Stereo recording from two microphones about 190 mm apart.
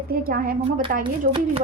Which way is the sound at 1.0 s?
30° right (ahead or behind).